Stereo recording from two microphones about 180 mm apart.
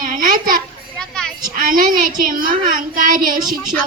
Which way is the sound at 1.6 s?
50° right (ahead or behind).